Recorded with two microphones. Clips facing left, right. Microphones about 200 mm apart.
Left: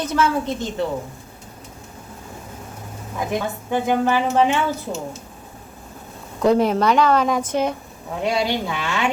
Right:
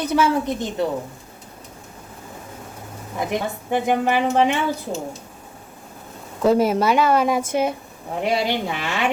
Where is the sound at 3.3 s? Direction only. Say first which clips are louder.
Even; 15° right (ahead or behind).